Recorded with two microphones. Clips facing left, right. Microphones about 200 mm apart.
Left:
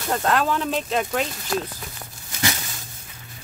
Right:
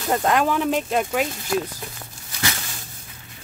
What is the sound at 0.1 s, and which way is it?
Speech, 15° right (ahead or behind).